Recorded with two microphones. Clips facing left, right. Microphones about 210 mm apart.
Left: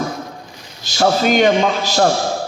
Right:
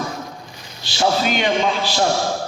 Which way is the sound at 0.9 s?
45° left (ahead or behind).